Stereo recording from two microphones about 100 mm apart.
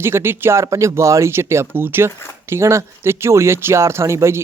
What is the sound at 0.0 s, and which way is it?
Speech, 25° right (ahead or behind).